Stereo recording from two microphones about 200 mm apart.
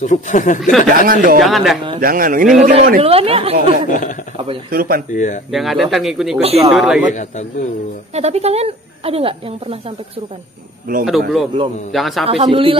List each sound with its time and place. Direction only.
0.0 s speech: 40° left (ahead or behind)
0.6 s speech: centre (ahead or behind)
0.8 s speech: 45° right (ahead or behind)
1.4 s speech: centre (ahead or behind)
2.0 s a woman's voice: 45° right (ahead or behind)
3.0 s speech: 30° right (ahead or behind)
4.6 s speech: 45° right (ahead or behind)
5.1 s speech: 40° left (ahead or behind)
5.5 s speech: centre (ahead or behind)
8.1 s a woman's voice: 30° right (ahead or behind)
11.1 s speech: centre (ahead or behind)
12.3 s speech: 30° right (ahead or behind)